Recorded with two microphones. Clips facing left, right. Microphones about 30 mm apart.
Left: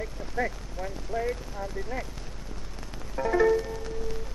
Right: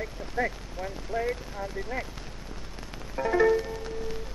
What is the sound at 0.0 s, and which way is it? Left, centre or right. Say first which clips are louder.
Speech: right 1 dB; centre.